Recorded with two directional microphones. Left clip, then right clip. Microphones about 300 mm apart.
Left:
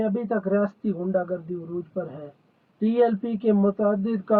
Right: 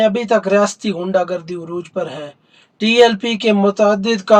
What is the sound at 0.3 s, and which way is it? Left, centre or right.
Speech, centre.